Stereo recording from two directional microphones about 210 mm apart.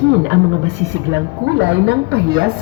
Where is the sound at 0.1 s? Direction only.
55° right (ahead or behind).